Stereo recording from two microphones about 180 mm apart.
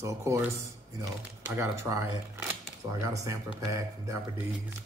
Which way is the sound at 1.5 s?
15° right (ahead or behind).